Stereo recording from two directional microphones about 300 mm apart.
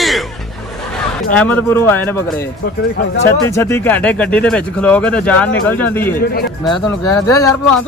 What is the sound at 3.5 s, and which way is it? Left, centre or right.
Speech, centre.